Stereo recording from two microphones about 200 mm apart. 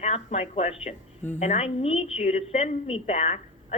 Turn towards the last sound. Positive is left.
turn(degrees=35)  # may be behind; listen again after turning